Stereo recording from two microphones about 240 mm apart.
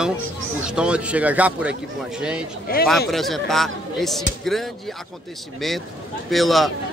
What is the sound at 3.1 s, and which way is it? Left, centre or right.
A man's voice, centre.